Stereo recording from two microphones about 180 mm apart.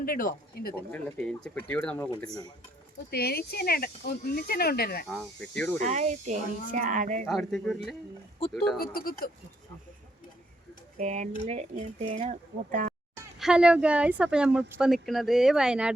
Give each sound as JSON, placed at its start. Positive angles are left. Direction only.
{"t": 0.0, "sound": "speech", "side_deg": 50}
{"t": 0.9, "sound": "speech", "side_deg": 5}
{"t": 3.1, "sound": "speech", "side_deg": 60}
{"t": 5.0, "sound": "speech", "side_deg": 5}
{"t": 5.8, "sound": "speech", "side_deg": -40}
{"t": 7.3, "sound": "speech", "side_deg": 0}
{"t": 8.8, "sound": "speech", "side_deg": 55}
{"t": 10.9, "sound": "speech", "side_deg": -40}
{"t": 13.4, "sound": "speech", "side_deg": -5}